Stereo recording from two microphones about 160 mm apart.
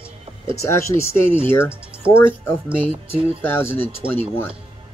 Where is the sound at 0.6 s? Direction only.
15° left (ahead or behind).